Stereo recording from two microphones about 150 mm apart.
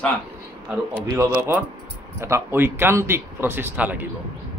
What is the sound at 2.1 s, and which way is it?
A man's voice, 20° right (ahead or behind).